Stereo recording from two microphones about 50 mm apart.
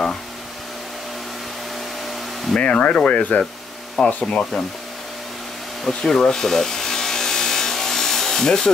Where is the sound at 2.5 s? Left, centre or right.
Left.